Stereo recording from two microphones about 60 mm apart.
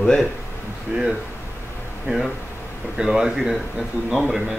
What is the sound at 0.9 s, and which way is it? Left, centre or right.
Speech, centre.